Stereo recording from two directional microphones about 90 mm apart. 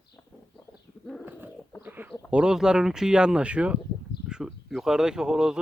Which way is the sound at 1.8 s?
20° right (ahead or behind).